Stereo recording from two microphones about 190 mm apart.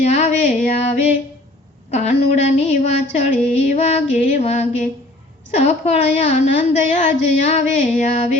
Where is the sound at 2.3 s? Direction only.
35° left (ahead or behind).